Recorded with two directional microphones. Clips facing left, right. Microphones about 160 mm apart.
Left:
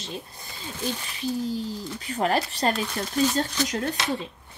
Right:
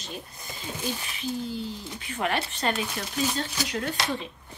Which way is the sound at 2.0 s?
35° left (ahead or behind).